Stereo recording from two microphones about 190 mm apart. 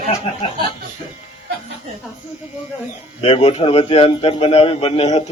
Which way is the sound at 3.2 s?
30° left (ahead or behind).